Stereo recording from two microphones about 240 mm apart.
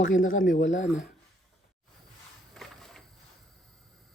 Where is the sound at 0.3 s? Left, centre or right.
Left.